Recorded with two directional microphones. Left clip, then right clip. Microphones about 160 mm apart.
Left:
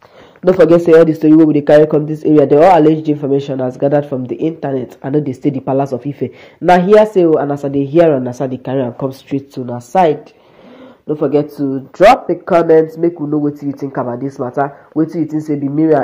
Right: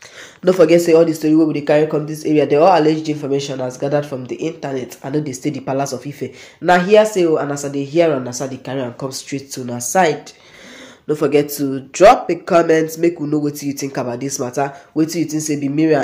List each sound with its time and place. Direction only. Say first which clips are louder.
0.7 s speech: left 4 dB; 40° left (ahead or behind)
9.8 s speech: left 3 dB; 30° left (ahead or behind)
11.7 s speech: left 2 dB; 5° left (ahead or behind)
12.7 s speech: left 5 dB; 15° right (ahead or behind); by 15.7 s centre (ahead or behind)